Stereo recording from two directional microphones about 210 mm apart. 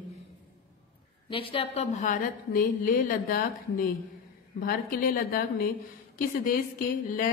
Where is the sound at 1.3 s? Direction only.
25° left (ahead or behind); by 6.6 s 40° left (ahead or behind).